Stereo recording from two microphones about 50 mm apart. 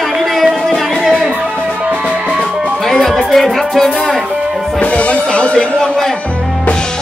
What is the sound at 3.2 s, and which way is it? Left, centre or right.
Music, centre.